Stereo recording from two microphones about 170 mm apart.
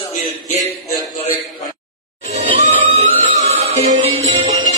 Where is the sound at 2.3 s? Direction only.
45° right (ahead or behind).